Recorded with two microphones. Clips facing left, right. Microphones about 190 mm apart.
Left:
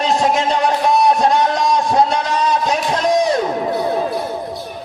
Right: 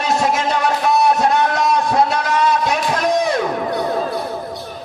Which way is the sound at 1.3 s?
20° left (ahead or behind).